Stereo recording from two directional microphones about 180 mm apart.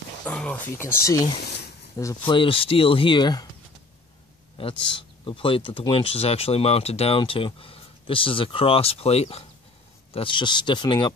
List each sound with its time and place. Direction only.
0.2 s speech: 5° left (ahead or behind); by 3.4 s 25° left (ahead or behind)
5.2 s speech: 30° left (ahead or behind)